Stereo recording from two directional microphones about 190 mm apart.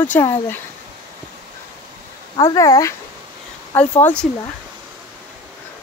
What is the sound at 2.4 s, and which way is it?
Speech, 20° left (ahead or behind).